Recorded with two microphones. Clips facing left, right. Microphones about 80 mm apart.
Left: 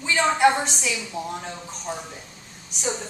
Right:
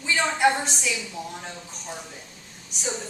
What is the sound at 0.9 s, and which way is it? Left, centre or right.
Speech, centre.